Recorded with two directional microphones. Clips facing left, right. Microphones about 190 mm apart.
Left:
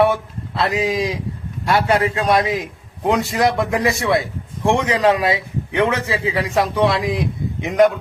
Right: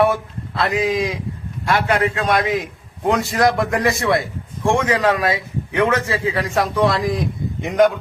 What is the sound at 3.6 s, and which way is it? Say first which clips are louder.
Speech: even; 5° left (ahead or behind).